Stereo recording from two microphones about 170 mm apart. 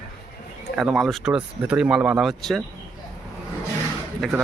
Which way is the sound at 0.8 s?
Centre (ahead or behind).